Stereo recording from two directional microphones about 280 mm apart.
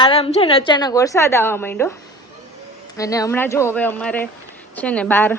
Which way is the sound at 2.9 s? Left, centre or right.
Centre.